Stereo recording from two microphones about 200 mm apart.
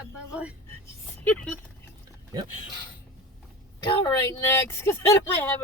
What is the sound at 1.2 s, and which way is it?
Speech, 10° left (ahead or behind).